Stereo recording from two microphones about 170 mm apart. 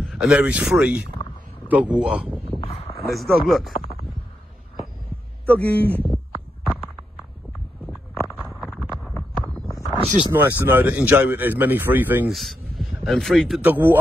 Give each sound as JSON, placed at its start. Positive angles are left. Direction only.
{"t": 0.0, "sound": "a man's voice", "side_deg": 0}
{"t": 2.6, "sound": "a sound", "side_deg": 35}
{"t": 3.1, "sound": "speech", "side_deg": 0}
{"t": 5.5, "sound": "speech", "side_deg": 10}
{"t": 6.6, "sound": "a sound", "side_deg": -10}
{"t": 8.4, "sound": "a sound", "side_deg": 0}
{"t": 10.3, "sound": "a man's voice", "side_deg": -10}
{"t": 12.4, "sound": "a man's voice", "side_deg": 0}
{"t": 13.7, "sound": "a man's voice", "side_deg": -10}